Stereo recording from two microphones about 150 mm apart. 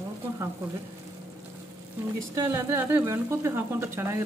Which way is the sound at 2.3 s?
20° right (ahead or behind).